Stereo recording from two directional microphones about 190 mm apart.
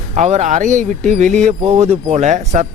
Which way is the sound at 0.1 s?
35° right (ahead or behind).